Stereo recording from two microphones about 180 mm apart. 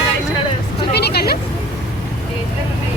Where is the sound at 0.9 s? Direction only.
65° left (ahead or behind).